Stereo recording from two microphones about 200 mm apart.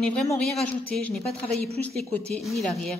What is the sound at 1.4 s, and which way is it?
Speech, 30° right (ahead or behind).